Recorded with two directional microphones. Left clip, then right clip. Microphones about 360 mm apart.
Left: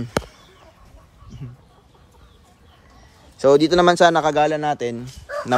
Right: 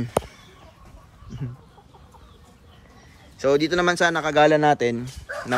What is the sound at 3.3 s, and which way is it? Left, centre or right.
A man's voice, centre.